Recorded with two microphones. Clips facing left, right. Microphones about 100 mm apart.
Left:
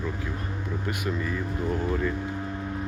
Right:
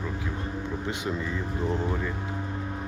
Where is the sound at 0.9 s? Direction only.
20° right (ahead or behind).